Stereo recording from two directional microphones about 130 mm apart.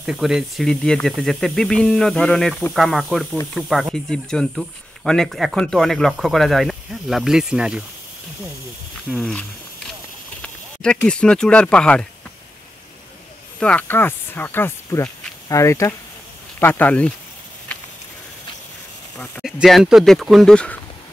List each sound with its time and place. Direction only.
0.0 s speech: 5° right (ahead or behind)
9.1 s speech: centre (ahead or behind)
10.4 s speech: 5° left (ahead or behind)
13.6 s speech: 10° left (ahead or behind)
19.4 s speech: centre (ahead or behind)